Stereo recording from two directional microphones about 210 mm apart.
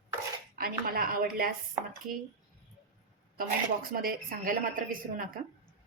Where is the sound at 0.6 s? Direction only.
45° right (ahead or behind).